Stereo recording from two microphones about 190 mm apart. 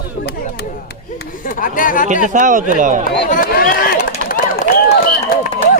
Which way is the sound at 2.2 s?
40° right (ahead or behind).